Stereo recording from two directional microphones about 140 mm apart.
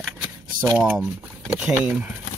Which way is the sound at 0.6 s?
15° right (ahead or behind).